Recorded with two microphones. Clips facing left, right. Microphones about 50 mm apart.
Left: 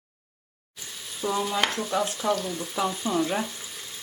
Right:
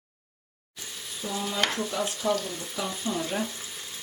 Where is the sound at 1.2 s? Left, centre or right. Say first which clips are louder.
Left 6 dB; centre.